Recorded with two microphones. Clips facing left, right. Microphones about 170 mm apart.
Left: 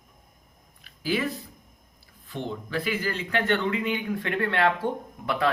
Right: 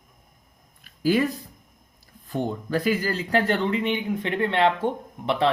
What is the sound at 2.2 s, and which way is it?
Speech, 45° right (ahead or behind).